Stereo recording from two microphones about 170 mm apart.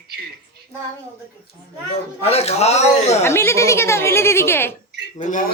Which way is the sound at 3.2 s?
15° left (ahead or behind).